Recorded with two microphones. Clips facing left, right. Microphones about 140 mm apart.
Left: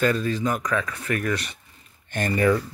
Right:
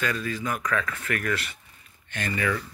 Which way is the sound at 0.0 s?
30° left (ahead or behind).